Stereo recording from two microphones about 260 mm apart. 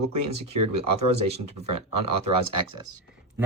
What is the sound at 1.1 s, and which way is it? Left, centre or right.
A man's voice, right.